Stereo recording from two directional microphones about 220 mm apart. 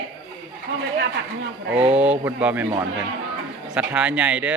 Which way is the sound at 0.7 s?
60° right (ahead or behind).